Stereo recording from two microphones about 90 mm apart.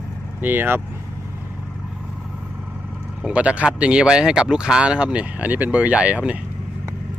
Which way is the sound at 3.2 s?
15° right (ahead or behind).